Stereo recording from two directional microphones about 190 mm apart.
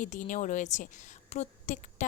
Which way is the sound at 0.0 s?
40° left (ahead or behind).